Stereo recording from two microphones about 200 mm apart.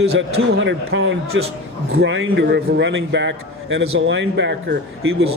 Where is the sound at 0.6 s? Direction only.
65° right (ahead or behind).